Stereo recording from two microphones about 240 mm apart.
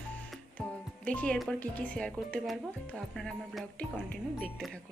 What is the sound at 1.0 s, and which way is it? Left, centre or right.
A woman's voice, centre.